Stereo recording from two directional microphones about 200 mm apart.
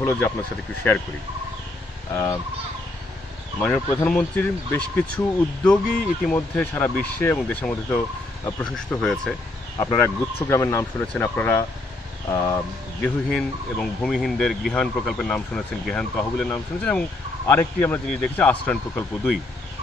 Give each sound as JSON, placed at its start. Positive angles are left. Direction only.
{"t": 0.0, "sound": "speech", "side_deg": 15}
{"t": 3.5, "sound": "speech", "side_deg": 10}
{"t": 9.0, "sound": "speech", "side_deg": 0}
{"t": 9.8, "sound": "speech", "side_deg": 15}
{"t": 13.0, "sound": "speech", "side_deg": 5}